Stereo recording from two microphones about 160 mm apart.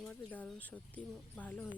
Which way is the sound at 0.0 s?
10° left (ahead or behind).